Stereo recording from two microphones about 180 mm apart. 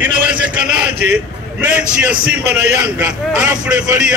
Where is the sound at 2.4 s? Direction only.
65° right (ahead or behind).